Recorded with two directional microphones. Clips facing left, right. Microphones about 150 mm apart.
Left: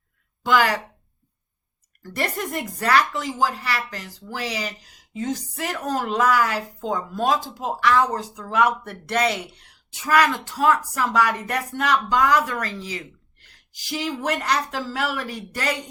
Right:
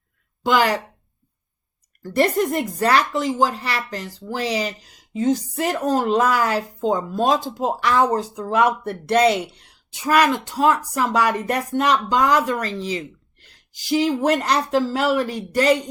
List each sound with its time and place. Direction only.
0.4 s speech: 20° right (ahead or behind)
2.1 s speech: 25° right (ahead or behind)